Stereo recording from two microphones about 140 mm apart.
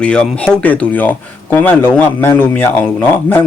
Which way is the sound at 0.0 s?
5° left (ahead or behind).